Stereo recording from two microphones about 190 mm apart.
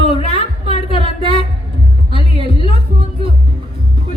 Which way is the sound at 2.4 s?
30° left (ahead or behind).